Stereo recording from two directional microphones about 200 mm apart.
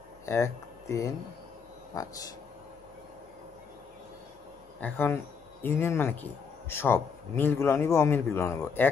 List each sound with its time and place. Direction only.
0.2 s a man's voice: 15° left (ahead or behind)
4.7 s a man's voice: 10° left (ahead or behind)